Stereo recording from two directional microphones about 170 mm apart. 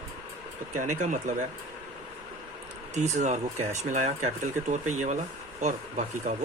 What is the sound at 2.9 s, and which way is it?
Speech, 45° right (ahead or behind).